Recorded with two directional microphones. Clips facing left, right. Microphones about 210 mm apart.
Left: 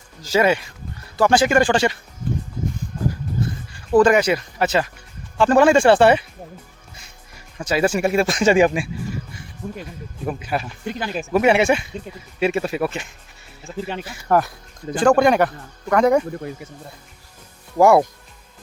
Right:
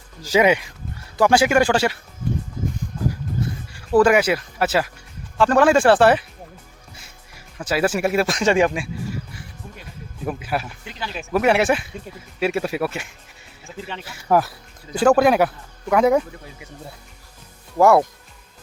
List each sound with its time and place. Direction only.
0.2 s speech: 15° right (ahead or behind)
3.9 s speech: 5° right (ahead or behind)
7.6 s speech: 5° right (ahead or behind)
9.6 s speech: 50° left (ahead or behind)
10.2 s speech: 5° right (ahead or behind)
10.8 s speech: 50° left (ahead or behind)
11.2 s speech: centre (ahead or behind)
14.3 s speech: 5° right (ahead or behind)
17.7 s speech: centre (ahead or behind)